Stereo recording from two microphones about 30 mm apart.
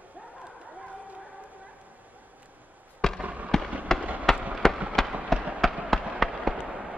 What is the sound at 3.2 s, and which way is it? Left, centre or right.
Fireworks, right.